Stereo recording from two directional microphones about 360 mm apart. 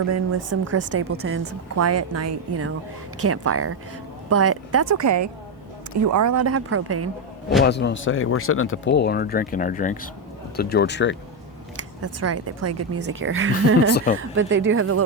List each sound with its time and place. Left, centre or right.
0.0 s a woman's voice: right
7.6 s speech: left
11.8 s a woman's voice: right
13.9 s speech: left
14.2 s a woman's voice: right